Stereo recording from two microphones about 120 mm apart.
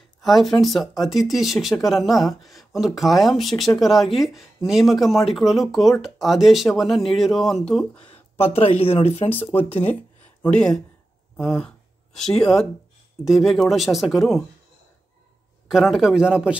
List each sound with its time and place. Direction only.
0.2 s speech: centre (ahead or behind)
8.1 s speech: 55° left (ahead or behind)
10.4 s speech: 10° left (ahead or behind)
15.7 s a man's voice: centre (ahead or behind)